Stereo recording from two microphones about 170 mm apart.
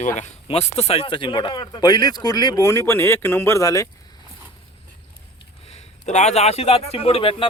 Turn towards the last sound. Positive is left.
turn(degrees=35)  # may be behind; listen again after turning